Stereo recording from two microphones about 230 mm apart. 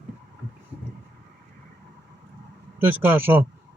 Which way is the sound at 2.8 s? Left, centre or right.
Centre.